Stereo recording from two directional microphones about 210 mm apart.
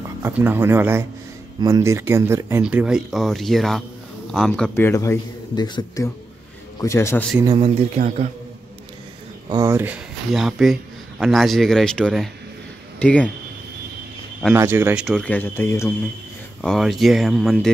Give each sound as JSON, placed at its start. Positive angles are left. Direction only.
{"t": 0.2, "sound": "speech", "side_deg": -10}
{"t": 7.4, "sound": "speech", "side_deg": -25}
{"t": 9.5, "sound": "speech", "side_deg": -15}
{"t": 14.5, "sound": "speech", "side_deg": -10}
{"t": 16.6, "sound": "speech", "side_deg": 0}